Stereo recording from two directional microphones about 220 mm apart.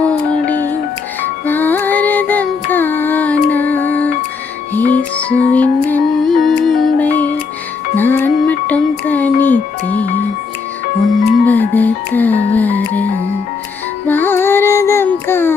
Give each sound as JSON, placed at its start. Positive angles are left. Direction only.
{"t": 0.0, "sound": "music", "side_deg": 5}
{"t": 4.9, "sound": "music", "side_deg": 30}
{"t": 5.5, "sound": "music", "side_deg": 5}
{"t": 11.4, "sound": "music", "side_deg": 10}
{"t": 14.1, "sound": "child singing", "side_deg": 10}